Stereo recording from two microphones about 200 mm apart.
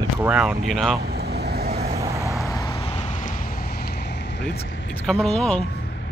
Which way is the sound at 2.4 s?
15° left (ahead or behind).